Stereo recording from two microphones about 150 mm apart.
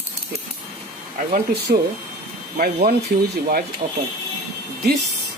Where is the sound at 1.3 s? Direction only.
90° right.